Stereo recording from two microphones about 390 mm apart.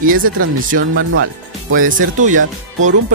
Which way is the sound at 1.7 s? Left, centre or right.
Centre.